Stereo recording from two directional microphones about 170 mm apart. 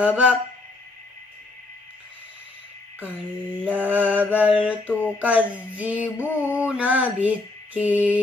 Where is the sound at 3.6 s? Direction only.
10° right (ahead or behind).